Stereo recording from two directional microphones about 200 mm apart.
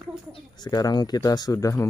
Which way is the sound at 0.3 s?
20° left (ahead or behind).